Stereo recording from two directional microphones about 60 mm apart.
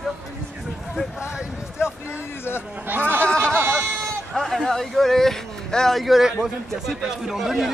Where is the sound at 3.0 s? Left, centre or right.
Centre.